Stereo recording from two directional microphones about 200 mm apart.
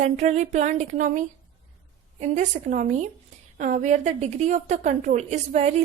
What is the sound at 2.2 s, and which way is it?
A woman's voice, 35° right (ahead or behind).